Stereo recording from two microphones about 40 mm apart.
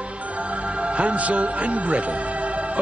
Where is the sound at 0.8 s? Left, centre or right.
Right.